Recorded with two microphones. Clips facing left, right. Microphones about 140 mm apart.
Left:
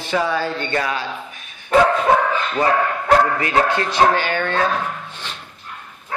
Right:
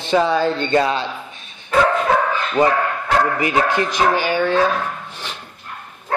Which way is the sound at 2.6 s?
10° right (ahead or behind).